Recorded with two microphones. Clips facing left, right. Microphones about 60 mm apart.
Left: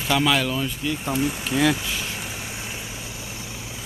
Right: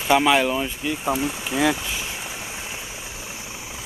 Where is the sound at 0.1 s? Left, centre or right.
Right.